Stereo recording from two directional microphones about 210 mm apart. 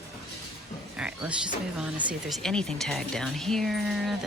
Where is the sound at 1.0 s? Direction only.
5° right (ahead or behind).